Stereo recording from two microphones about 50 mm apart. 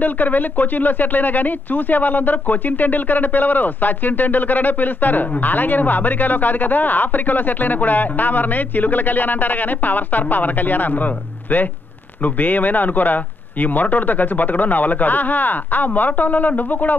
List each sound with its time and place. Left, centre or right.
0.0 s speech: left